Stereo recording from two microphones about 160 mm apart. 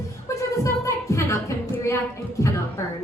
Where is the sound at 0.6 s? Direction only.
20° left (ahead or behind).